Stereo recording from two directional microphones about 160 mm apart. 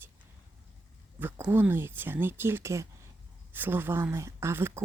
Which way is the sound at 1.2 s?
15° right (ahead or behind).